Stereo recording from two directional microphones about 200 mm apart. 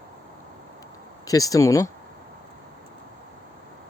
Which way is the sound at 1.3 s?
15° left (ahead or behind).